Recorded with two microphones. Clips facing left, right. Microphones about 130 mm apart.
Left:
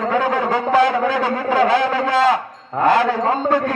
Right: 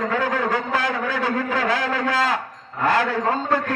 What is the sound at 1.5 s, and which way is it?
Speech, 25° left (ahead or behind).